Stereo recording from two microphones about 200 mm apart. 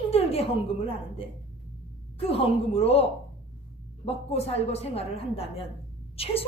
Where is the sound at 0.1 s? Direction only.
30° left (ahead or behind).